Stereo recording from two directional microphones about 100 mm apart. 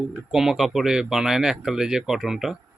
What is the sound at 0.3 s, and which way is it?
Speech, 5° right (ahead or behind).